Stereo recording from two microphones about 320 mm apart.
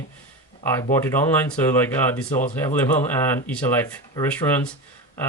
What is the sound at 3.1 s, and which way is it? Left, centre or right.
Speech, centre.